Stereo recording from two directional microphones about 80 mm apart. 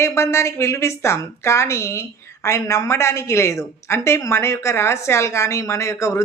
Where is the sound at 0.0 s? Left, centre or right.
Left.